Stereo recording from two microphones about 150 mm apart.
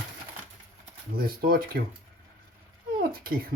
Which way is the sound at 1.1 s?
90° right.